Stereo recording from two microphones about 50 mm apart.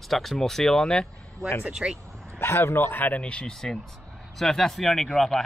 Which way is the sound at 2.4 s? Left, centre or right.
Left.